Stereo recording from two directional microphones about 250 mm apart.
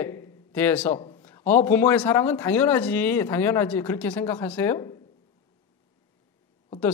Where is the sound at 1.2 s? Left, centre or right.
Centre.